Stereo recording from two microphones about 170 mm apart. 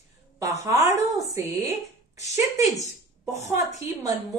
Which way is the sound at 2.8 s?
40° left (ahead or behind).